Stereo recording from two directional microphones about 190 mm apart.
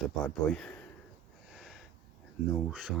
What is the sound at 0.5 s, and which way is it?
Speech, 5° left (ahead or behind).